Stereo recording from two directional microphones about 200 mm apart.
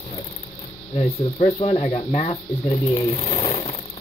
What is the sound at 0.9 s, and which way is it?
Speech, 30° left (ahead or behind).